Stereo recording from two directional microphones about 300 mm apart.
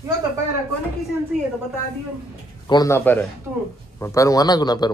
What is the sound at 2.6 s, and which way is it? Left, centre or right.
A man's voice, centre.